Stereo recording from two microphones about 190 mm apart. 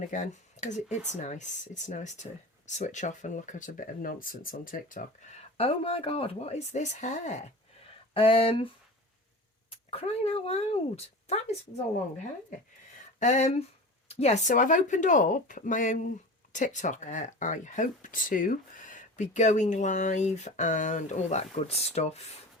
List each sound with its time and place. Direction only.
0.0 s speech: 40° left (ahead or behind)
8.1 s speech: 30° left (ahead or behind)
13.1 s speech: 40° left (ahead or behind)